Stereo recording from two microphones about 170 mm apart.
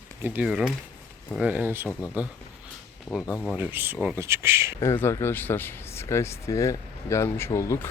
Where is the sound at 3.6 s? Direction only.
10° right (ahead or behind).